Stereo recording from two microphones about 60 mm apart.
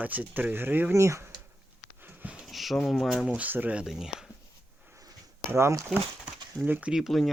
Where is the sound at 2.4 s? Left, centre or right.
Centre.